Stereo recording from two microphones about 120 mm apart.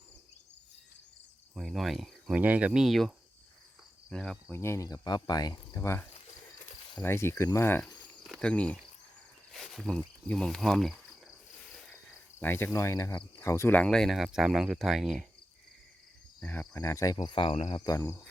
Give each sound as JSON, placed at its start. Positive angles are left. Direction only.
{"t": 1.5, "sound": "cricket", "side_deg": 0}
{"t": 2.3, "sound": "speech", "side_deg": -15}
{"t": 4.1, "sound": "speech", "side_deg": 5}
{"t": 4.5, "sound": "speech", "side_deg": 20}
{"t": 7.0, "sound": "speech", "side_deg": 20}
{"t": 8.2, "sound": "speech", "side_deg": 5}
{"t": 11.6, "sound": "cricket", "side_deg": 5}
{"t": 12.4, "sound": "cricket", "side_deg": 15}
{"t": 12.7, "sound": "speech", "side_deg": 25}
{"t": 13.3, "sound": "cricket", "side_deg": 25}
{"t": 13.7, "sound": "speech", "side_deg": 5}
{"t": 16.4, "sound": "cricket", "side_deg": 15}